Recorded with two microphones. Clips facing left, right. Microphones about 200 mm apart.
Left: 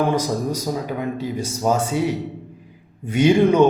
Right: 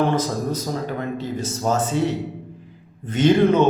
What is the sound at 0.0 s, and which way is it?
A man's voice, 10° left (ahead or behind).